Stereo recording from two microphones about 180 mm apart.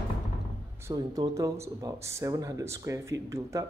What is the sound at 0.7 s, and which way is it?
Speech, 15° right (ahead or behind).